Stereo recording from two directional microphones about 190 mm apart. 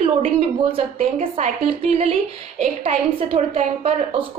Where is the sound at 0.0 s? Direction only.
30° right (ahead or behind).